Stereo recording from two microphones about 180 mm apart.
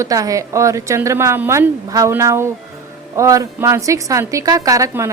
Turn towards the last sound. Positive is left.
turn(degrees=-15)  # may be behind; listen again after turning